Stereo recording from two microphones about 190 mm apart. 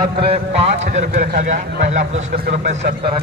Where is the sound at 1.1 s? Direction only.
40° right (ahead or behind).